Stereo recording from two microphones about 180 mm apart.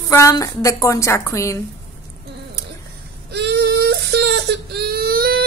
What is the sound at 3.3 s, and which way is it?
Whimper, 65° right (ahead or behind).